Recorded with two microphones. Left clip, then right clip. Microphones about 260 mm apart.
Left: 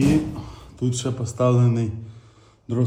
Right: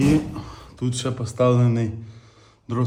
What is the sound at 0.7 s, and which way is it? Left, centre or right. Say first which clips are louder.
Speech: even; centre.